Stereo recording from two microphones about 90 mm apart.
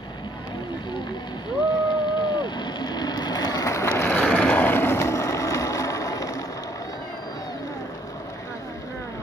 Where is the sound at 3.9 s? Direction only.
20° left (ahead or behind).